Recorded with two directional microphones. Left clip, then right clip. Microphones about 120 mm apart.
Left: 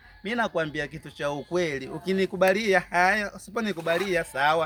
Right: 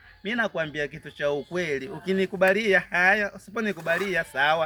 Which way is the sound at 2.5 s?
35° left (ahead or behind).